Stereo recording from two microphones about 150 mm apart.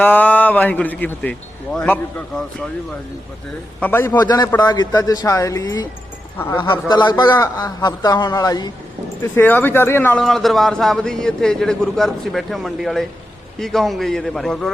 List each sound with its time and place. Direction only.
0.0 s a man's voice: 10° left (ahead or behind)
3.8 s a man's voice: 10° left (ahead or behind)
4.2 s a man's voice: 25° left (ahead or behind)
9.2 s speech: 15° left (ahead or behind)